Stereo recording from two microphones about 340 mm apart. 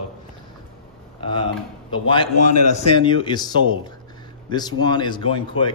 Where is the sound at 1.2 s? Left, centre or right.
Centre.